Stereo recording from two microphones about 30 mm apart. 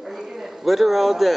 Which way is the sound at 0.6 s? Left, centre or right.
Centre.